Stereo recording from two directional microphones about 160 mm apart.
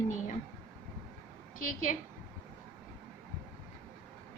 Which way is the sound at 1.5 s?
55° left (ahead or behind).